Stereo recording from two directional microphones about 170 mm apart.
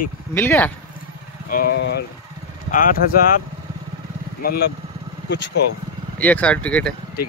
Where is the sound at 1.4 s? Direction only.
60° left (ahead or behind); by 2.0 s 80° left.